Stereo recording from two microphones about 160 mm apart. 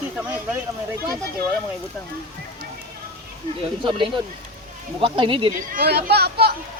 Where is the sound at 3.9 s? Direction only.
30° right (ahead or behind).